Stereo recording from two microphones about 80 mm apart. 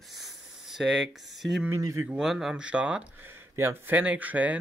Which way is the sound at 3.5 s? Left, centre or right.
Right.